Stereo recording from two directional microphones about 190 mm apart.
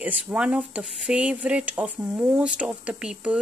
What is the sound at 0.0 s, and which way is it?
Speech, 5° right (ahead or behind).